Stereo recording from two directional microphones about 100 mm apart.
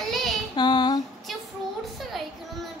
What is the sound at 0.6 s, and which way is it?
Female singing, 50° left (ahead or behind).